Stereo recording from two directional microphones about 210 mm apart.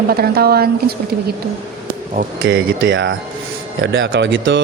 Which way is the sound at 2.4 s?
60° right (ahead or behind).